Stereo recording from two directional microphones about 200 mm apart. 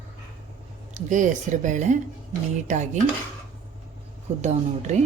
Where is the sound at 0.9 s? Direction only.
40° right (ahead or behind).